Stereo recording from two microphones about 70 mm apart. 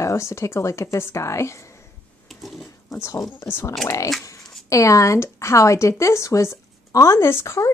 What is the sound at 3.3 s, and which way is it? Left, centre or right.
Speech, left.